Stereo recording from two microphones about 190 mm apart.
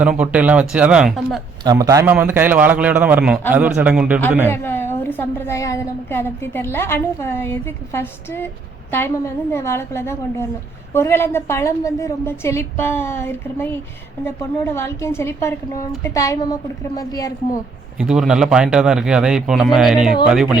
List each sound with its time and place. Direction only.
0.0 s speech: 5° right (ahead or behind)
1.6 s a man's voice: 20° right (ahead or behind)
4.4 s a woman's voice: 10° left (ahead or behind)
17.9 s speech: 5° right (ahead or behind)